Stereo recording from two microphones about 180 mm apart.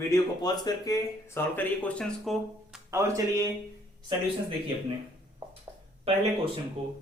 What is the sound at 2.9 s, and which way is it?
Speech, 15° right (ahead or behind).